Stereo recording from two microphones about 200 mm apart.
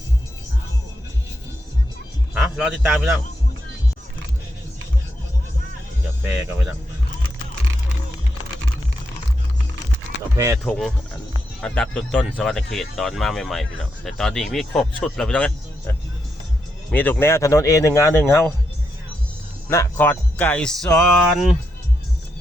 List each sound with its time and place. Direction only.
2.3 s a man's voice: 5° right (ahead or behind)
10.3 s speech: 15° right (ahead or behind)
10.7 s speech: 5° left (ahead or behind)
19.6 s speech: 10° left (ahead or behind)